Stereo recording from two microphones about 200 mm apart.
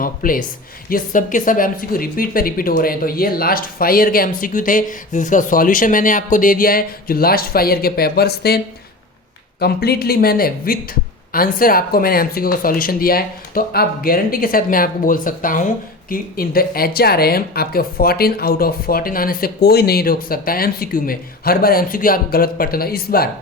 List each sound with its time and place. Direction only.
0.0 s speech: 45° left (ahead or behind)